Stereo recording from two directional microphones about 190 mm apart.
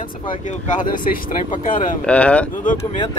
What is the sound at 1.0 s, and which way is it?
Speech, 45° left (ahead or behind).